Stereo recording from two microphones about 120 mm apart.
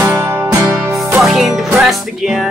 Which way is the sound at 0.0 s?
25° right (ahead or behind).